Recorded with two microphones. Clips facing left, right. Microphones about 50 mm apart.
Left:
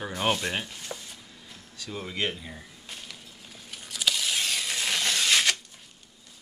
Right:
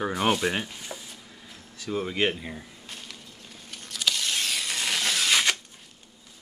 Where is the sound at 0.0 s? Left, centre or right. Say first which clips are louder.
Right 3 dB; centre.